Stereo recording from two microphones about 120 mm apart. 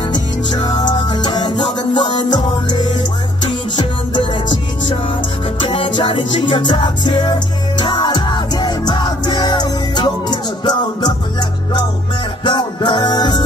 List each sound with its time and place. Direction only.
0.1 s music: 40° left (ahead or behind)
12.4 s music: 40° left (ahead or behind)